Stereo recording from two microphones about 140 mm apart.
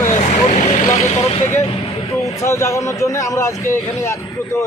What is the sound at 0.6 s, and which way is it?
Vehicle, 60° left (ahead or behind).